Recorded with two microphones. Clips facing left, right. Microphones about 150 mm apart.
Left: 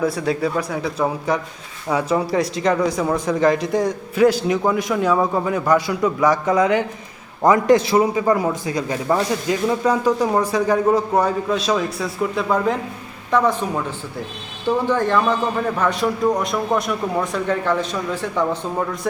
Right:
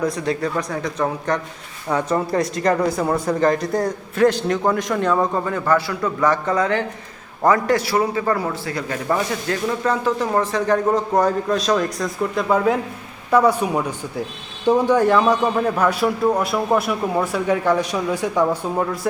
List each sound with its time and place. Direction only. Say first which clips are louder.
0.0 s a man's voice: left 1 dB; 5° left (ahead or behind); by 18.9 s 10° right (ahead or behind)